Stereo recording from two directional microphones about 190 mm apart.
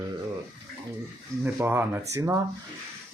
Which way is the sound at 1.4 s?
10° right (ahead or behind).